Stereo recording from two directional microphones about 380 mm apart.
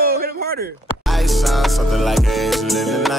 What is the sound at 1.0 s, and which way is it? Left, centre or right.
Music, centre.